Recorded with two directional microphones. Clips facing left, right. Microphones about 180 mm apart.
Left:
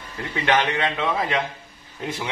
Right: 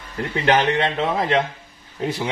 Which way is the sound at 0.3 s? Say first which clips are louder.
Right 3 dB; 30° right (ahead or behind).